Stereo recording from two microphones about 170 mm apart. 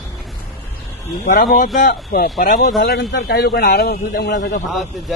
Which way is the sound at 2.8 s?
70° left (ahead or behind).